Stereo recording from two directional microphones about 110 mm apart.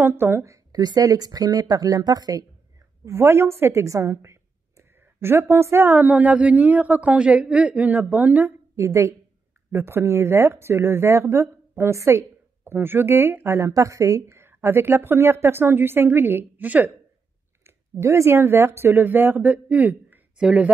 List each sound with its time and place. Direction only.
0.0 s speech: 20° right (ahead or behind)
0.7 s speech: 35° right (ahead or behind)
3.1 s a woman's voice: 25° right (ahead or behind)
17.6 s speech: 25° right (ahead or behind); by 20.7 s 10° right (ahead or behind)